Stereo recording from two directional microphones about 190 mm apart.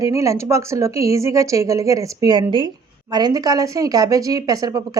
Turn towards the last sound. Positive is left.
turn(degrees=-20)  # may be behind; listen again after turning